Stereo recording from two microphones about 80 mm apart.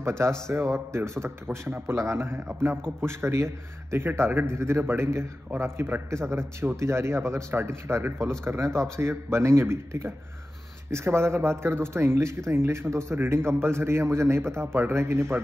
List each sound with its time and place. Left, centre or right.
0.5 s a man's voice: right